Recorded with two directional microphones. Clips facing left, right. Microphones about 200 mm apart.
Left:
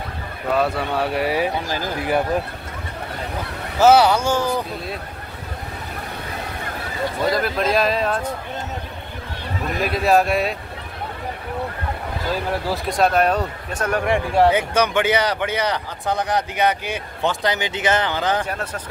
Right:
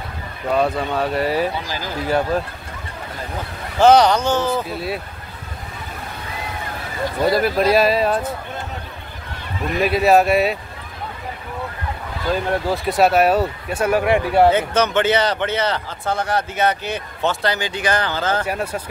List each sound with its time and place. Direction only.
0.6 s a man's voice: 10° left (ahead or behind)
3.8 s a man's voice: 5° left (ahead or behind)
4.6 s speech: 5° right (ahead or behind)
7.3 s speech: 5° right (ahead or behind)
9.8 s speech: centre (ahead or behind)
12.4 s speech: centre (ahead or behind)
14.5 s a man's voice: 10° left (ahead or behind)
18.4 s speech: 10° right (ahead or behind)